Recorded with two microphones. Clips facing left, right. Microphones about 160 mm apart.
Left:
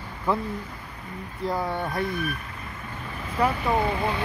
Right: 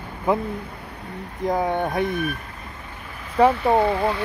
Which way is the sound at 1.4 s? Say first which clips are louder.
Right 5 dB; 20° right (ahead or behind).